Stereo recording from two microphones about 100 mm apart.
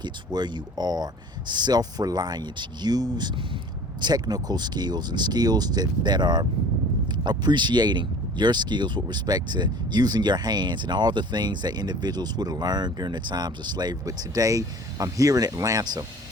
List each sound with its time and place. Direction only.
0.0 s speech: 45° right (ahead or behind)